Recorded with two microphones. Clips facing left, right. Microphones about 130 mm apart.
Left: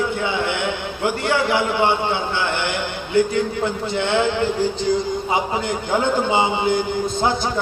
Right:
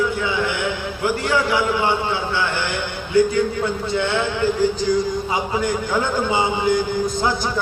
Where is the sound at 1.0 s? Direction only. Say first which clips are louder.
Even; 25° left (ahead or behind).